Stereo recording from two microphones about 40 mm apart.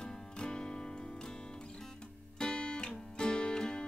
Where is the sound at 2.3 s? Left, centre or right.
Left.